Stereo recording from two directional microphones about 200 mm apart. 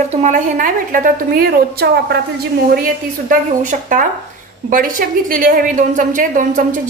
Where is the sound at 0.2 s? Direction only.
40° right (ahead or behind).